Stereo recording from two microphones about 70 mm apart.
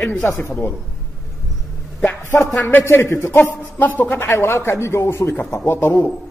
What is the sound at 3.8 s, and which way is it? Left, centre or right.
A man's voice, left.